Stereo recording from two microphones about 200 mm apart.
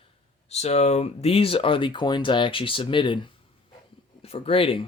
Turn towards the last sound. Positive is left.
turn(degrees=25)  # may be behind; listen again after turning